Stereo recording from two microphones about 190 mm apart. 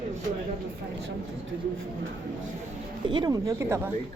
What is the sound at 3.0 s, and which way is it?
Speech, 25° right (ahead or behind).